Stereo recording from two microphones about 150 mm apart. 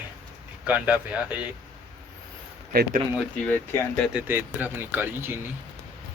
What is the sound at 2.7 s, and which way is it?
Speech, 80° right.